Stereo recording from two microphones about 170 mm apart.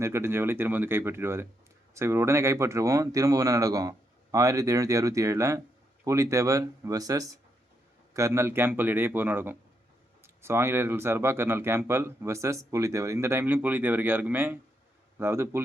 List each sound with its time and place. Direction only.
0.0 s speech: 15° right (ahead or behind)